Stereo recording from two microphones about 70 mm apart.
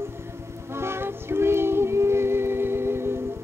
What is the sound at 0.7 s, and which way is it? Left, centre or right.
Music, right.